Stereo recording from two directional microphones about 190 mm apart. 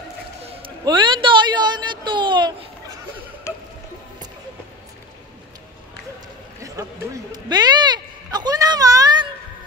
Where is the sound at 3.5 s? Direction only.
15° left (ahead or behind).